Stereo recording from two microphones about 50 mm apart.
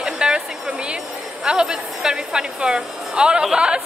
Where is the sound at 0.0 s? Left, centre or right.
Centre.